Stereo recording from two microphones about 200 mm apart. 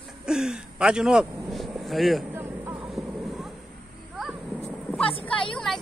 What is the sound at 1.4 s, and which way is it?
Vehicle, centre (ahead or behind).